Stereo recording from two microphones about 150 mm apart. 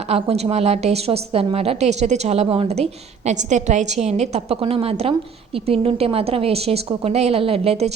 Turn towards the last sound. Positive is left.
turn(degrees=-45)  # may be behind; listen again after turning